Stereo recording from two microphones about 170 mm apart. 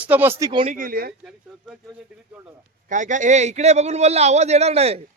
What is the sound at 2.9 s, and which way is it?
A man's voice, 45° right (ahead or behind).